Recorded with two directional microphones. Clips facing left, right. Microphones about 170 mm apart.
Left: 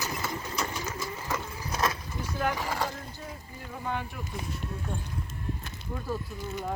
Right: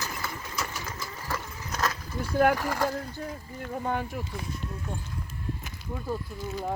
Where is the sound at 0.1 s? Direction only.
25° left (ahead or behind).